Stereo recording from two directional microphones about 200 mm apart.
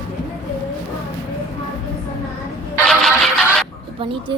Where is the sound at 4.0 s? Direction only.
25° right (ahead or behind).